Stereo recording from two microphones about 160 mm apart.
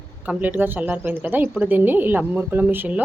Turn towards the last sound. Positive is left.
turn(degrees=-10)  # may be behind; listen again after turning